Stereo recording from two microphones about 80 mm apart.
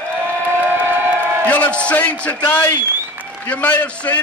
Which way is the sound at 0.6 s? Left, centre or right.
Right.